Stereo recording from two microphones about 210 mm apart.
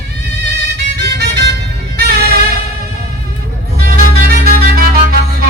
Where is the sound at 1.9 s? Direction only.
50° right (ahead or behind).